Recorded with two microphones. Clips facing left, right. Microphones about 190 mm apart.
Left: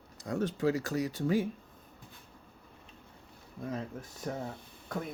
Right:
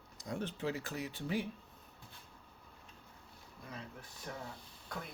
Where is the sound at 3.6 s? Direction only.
45° left (ahead or behind).